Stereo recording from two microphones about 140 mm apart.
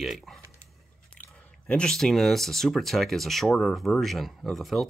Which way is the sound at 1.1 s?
10° left (ahead or behind).